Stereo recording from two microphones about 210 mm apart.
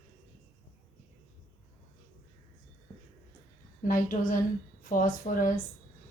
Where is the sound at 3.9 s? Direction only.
40° left (ahead or behind).